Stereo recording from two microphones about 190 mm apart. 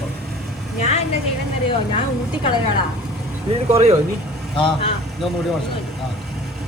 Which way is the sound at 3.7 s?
35° right (ahead or behind).